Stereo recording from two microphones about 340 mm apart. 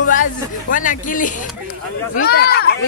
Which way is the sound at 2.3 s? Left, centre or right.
Left.